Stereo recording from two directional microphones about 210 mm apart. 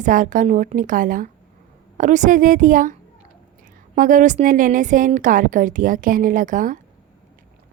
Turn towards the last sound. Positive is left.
turn(degrees=-40)  # may be behind; listen again after turning